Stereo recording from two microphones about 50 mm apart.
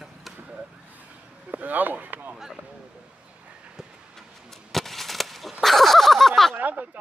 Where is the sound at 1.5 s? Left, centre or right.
Right.